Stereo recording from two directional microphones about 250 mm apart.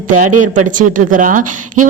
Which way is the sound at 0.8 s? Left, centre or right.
Right.